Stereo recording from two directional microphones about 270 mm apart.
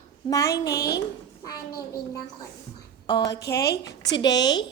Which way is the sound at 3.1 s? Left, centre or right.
Centre.